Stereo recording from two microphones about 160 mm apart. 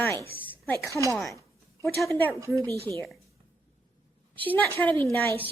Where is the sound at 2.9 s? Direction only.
25° right (ahead or behind).